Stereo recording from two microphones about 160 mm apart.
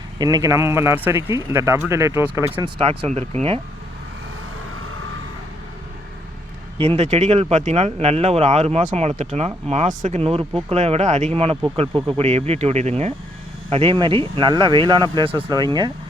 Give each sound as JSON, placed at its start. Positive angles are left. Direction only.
{"t": 0.2, "sound": "speech", "side_deg": -25}
{"t": 2.6, "sound": "speech", "side_deg": -35}
{"t": 6.7, "sound": "speech", "side_deg": -40}